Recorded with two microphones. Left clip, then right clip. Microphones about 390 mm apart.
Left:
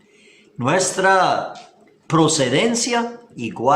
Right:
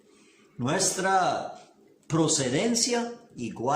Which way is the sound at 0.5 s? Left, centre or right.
Left.